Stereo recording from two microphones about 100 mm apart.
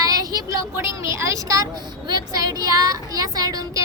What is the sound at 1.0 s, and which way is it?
A woman's voice, 30° right (ahead or behind).